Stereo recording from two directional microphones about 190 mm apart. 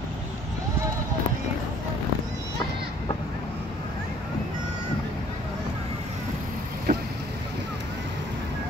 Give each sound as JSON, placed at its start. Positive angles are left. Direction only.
{"t": 6.9, "sound": "vehicle", "side_deg": -45}